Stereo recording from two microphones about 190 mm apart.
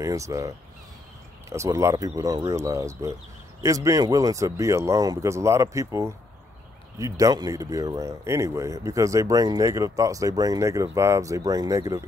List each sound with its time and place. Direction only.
0.0 s speech: 15° right (ahead or behind)